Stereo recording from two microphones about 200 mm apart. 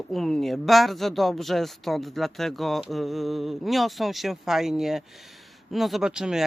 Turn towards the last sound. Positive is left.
turn(degrees=-5)  # may be behind; listen again after turning